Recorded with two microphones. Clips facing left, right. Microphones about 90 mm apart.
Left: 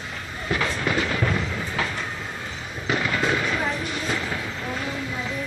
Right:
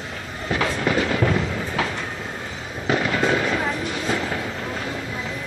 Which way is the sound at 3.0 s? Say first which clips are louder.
Right 2 dB; 30° right (ahead or behind).